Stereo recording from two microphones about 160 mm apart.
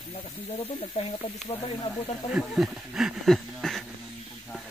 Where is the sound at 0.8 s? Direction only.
40° left (ahead or behind).